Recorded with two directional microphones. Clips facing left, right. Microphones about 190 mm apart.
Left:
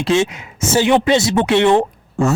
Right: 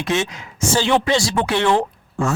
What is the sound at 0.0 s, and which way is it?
A woman's voice, 25° left (ahead or behind).